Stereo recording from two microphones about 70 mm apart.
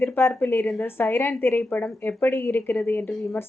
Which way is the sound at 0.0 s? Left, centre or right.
Left.